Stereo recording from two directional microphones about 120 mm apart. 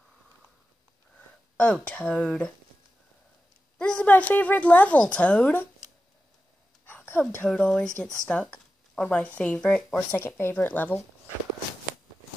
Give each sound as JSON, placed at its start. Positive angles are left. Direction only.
{"t": 1.6, "sound": "a woman's voice", "side_deg": 10}
{"t": 3.7, "sound": "a woman's voice", "side_deg": 10}
{"t": 6.9, "sound": "a sound", "side_deg": 15}
{"t": 7.4, "sound": "a woman's voice", "side_deg": 5}
{"t": 9.9, "sound": "a woman's voice", "side_deg": 15}